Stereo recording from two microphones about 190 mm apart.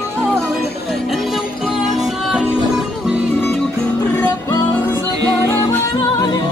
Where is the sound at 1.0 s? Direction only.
Centre (ahead or behind).